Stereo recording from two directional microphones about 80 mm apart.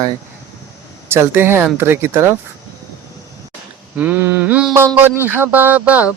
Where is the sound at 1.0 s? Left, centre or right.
Right.